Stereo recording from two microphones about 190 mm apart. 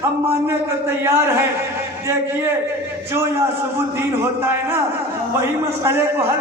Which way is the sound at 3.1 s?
15° right (ahead or behind).